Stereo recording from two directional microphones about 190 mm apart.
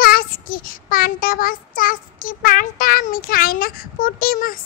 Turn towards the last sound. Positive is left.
turn(degrees=50)  # may be behind; listen again after turning